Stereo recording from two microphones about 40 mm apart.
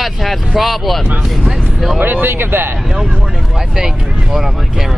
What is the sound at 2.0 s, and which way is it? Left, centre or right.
Speech, right.